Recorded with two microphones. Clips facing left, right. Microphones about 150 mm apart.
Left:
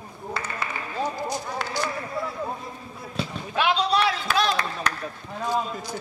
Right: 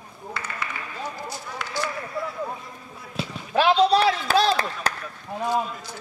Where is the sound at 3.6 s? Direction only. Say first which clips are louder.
Right 5 dB; 35° right (ahead or behind).